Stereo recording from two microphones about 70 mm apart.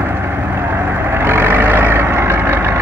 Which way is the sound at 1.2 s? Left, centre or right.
Right.